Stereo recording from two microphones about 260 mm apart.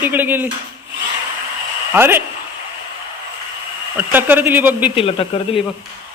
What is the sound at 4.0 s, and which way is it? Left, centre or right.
Speech, centre.